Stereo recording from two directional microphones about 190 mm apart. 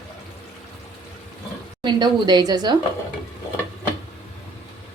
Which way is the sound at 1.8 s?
25° right (ahead or behind).